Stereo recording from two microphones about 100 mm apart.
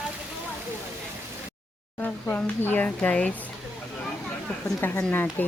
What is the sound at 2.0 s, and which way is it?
Speech, 15° left (ahead or behind).